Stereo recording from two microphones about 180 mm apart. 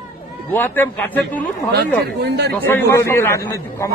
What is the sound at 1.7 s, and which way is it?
Speech, 65° right (ahead or behind).